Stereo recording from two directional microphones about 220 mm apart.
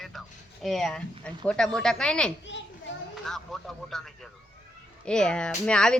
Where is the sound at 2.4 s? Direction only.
55° left (ahead or behind).